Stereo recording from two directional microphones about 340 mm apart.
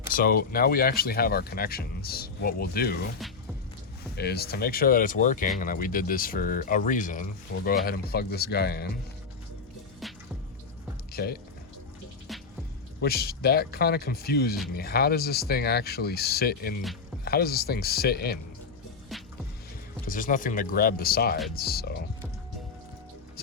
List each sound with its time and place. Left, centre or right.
0.1 s speech: left
4.1 s speech: left
10.0 s drip: centre
11.1 s speech: left
12.3 s music: centre
13.0 s speech: left
19.1 s music: centre
20.1 s speech: left